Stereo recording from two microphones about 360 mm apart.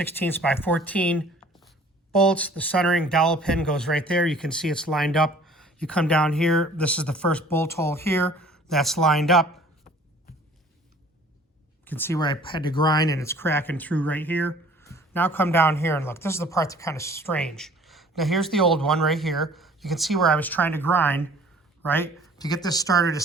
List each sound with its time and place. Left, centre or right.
0.0 s speech: centre
11.9 s speech: centre